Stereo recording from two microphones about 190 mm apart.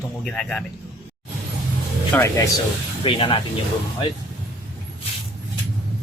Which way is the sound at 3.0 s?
25° left (ahead or behind).